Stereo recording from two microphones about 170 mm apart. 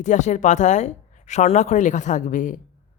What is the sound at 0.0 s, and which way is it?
Speech, 45° left (ahead or behind).